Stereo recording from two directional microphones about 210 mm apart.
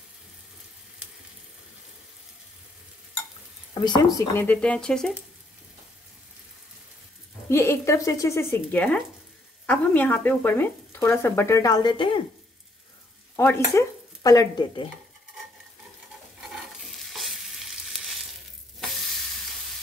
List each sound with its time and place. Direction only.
3.8 s speech: 20° left (ahead or behind)
4.4 s speech: 5° left (ahead or behind)
7.4 s speech: 15° left (ahead or behind)
13.4 s speech: 15° left (ahead or behind)
16.5 s stir: centre (ahead or behind)